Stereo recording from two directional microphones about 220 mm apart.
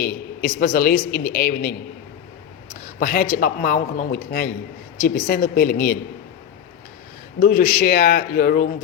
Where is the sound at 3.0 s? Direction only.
40° left (ahead or behind).